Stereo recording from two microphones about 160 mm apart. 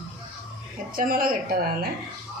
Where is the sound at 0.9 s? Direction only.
65° right (ahead or behind).